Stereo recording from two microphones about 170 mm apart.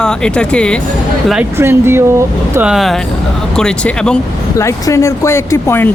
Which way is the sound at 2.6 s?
5° right (ahead or behind).